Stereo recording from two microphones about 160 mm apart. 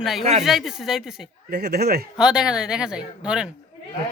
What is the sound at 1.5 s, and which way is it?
Speech, 90° right.